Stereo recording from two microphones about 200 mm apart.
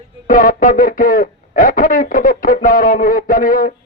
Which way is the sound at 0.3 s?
45° left (ahead or behind).